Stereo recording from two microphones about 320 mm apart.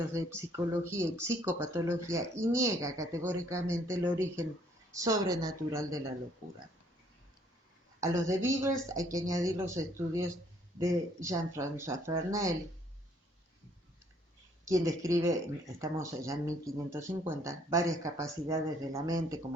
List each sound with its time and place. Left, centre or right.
0.1 s speech: centre
8.0 s speech: centre
14.6 s speech: centre